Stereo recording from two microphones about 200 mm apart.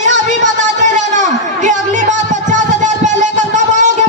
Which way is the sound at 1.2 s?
40° right (ahead or behind).